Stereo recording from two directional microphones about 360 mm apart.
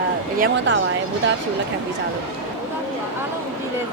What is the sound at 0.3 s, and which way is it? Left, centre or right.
Speech, right.